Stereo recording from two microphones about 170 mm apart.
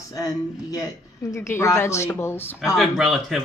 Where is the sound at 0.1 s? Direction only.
20° left (ahead or behind).